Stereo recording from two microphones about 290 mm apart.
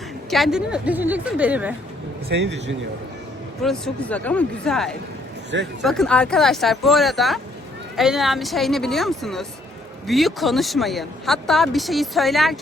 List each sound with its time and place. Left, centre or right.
0.3 s speech: centre
2.3 s a man's voice: right
3.6 s speech: centre